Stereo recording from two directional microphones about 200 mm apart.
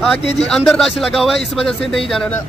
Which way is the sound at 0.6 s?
Centre (ahead or behind).